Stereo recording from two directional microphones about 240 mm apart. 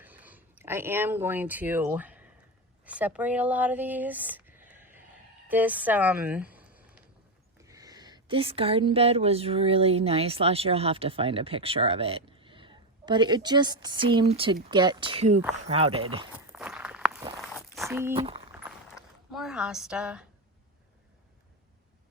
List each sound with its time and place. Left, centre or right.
0.0 s speech: centre; by 16.2 s right
16.5 s walk: centre
17.8 s speech: centre
18.2 s speech: right
18.9 s a sound: centre